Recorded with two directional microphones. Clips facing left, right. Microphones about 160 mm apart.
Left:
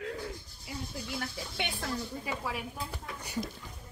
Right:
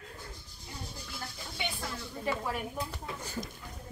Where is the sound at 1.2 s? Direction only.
65° left (ahead or behind).